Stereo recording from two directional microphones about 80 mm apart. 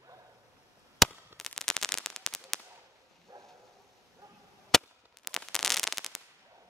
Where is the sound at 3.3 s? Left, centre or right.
Right.